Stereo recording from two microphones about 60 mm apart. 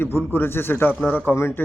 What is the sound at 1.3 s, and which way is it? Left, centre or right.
Speech, left.